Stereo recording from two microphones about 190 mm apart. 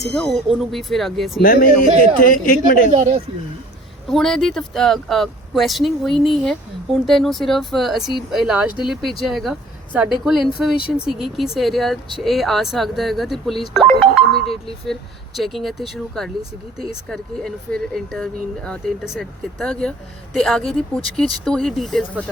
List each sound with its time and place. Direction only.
0.0 s speech: centre (ahead or behind)
1.4 s a man's voice: 50° left (ahead or behind)
4.1 s speech: centre (ahead or behind)
13.7 s music: 5° left (ahead or behind)
15.4 s speech: centre (ahead or behind)